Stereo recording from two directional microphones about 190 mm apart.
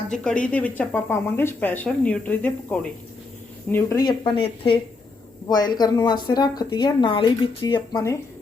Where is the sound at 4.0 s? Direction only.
25° left (ahead or behind).